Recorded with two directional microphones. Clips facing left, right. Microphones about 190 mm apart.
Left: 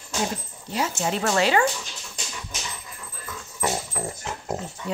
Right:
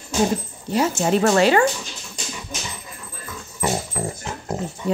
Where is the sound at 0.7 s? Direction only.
55° right (ahead or behind).